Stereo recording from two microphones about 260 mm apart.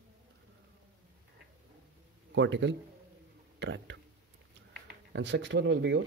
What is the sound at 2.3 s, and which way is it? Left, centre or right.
Speech, right.